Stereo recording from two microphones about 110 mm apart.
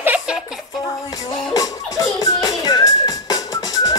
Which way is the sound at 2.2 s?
40° left (ahead or behind).